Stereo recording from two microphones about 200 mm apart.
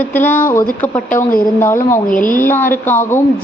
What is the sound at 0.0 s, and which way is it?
A woman's voice, 10° left (ahead or behind).